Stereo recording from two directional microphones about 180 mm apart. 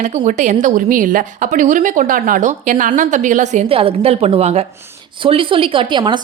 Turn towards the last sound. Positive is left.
turn(degrees=-25)  # may be behind; listen again after turning